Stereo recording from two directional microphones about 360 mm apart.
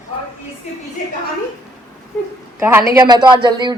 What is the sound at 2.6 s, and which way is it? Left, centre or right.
Speech, centre.